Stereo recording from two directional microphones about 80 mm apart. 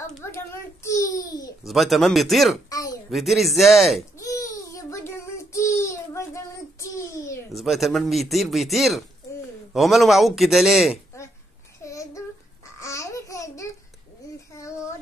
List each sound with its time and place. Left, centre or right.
0.2 s babbling: left
1.7 s a man's voice: centre
2.7 s a sound: left
3.1 s a man's voice: centre
4.2 s child singing: left
7.5 s a man's voice: centre
11.8 s babbling: left